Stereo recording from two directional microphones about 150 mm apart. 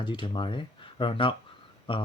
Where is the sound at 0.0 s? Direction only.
35° left (ahead or behind).